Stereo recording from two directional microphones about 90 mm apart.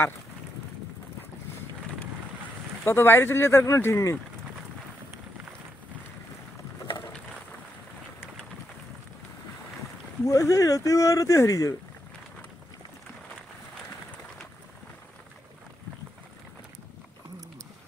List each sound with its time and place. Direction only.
2.8 s speech: 25° left (ahead or behind)
10.2 s speech: 35° left (ahead or behind)